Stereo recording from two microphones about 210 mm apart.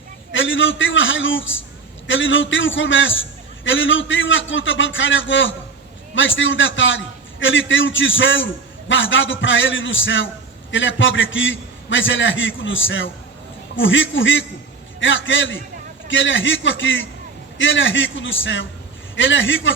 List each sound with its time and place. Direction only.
0.3 s a man's voice: 65° left (ahead or behind)